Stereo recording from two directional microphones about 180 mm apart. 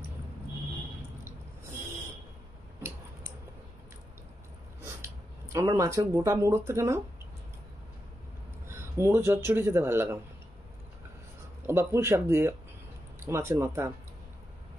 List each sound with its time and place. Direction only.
4.8 s speech: 15° right (ahead or behind)
8.6 s speech: 15° right (ahead or behind)
11.6 s speech: 15° right (ahead or behind)